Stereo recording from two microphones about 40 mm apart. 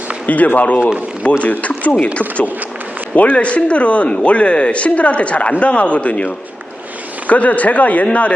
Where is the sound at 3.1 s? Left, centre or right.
Left.